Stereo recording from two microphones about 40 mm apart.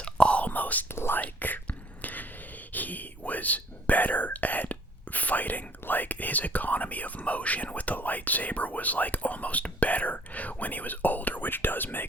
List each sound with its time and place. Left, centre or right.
0.0 s whispering: left
0.9 s whispering: left
1.2 s whispering: left